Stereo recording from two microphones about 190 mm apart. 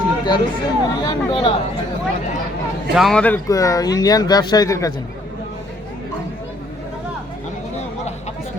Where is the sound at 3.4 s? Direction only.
20° left (ahead or behind).